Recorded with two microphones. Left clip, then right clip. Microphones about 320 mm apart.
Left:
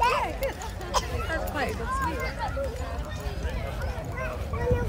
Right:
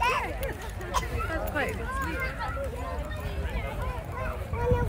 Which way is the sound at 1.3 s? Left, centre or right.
Left.